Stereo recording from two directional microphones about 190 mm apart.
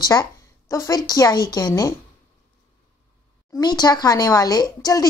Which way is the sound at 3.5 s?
20° left (ahead or behind).